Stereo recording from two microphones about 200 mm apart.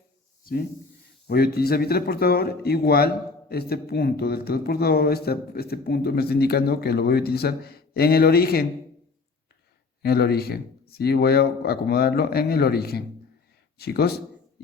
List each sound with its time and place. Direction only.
0.4 s speech: 45° left (ahead or behind)
10.0 s speech: 50° left (ahead or behind)